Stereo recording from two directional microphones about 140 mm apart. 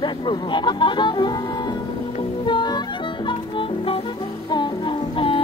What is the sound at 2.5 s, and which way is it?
Music, 30° left (ahead or behind).